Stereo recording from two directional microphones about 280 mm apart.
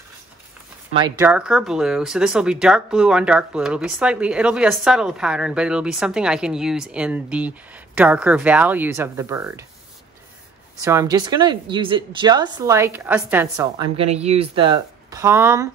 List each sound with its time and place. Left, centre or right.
0.9 s speech: centre
10.8 s speech: centre
13.9 s speech: right